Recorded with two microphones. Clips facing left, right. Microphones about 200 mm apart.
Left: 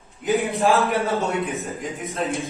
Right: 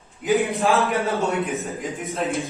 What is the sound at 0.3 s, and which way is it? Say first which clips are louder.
A man's voice: even; centre (ahead or behind).